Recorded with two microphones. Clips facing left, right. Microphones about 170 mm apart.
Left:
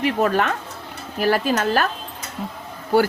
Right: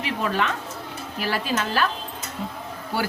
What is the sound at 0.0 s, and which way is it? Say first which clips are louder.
Speech: left 6 dB; 45° left (ahead or behind).